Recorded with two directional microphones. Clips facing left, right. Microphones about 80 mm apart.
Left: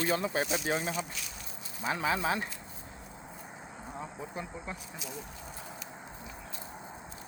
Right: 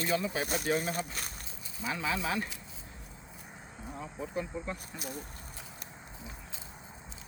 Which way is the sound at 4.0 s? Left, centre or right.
Left.